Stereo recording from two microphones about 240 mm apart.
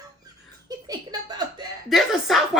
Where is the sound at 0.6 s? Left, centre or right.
Centre.